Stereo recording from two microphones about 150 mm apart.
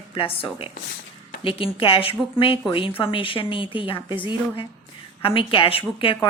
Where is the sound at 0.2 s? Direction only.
35° left (ahead or behind).